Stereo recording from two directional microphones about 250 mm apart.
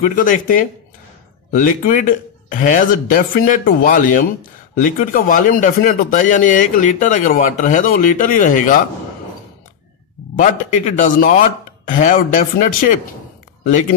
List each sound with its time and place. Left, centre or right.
0.0 s speech: left
10.3 s speech: left